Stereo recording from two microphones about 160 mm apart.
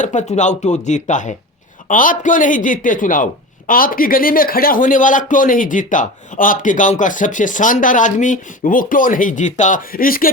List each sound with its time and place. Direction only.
0.0 s speech: 50° left (ahead or behind)